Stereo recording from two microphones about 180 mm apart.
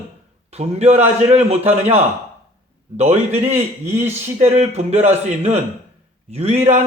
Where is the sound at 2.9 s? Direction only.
35° right (ahead or behind).